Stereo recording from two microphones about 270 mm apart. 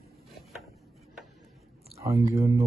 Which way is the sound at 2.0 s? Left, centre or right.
Centre.